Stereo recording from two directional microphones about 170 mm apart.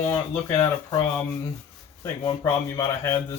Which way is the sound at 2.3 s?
15° left (ahead or behind).